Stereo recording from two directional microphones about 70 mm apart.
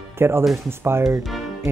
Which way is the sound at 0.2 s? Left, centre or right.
Right.